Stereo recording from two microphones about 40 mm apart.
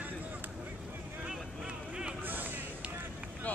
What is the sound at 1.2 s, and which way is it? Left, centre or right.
Vehicle, right.